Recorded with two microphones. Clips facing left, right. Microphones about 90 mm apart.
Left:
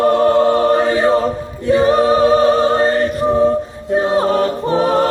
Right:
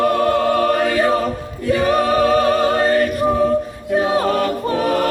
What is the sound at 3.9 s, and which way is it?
Choir, 30° left (ahead or behind).